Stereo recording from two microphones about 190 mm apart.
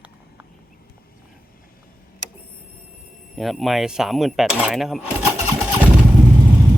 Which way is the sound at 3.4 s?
Centre (ahead or behind).